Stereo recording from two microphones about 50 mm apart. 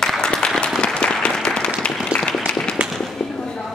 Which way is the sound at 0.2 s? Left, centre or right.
Centre.